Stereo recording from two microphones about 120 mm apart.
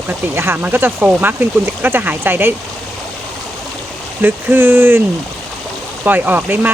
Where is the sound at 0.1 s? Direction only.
20° right (ahead or behind).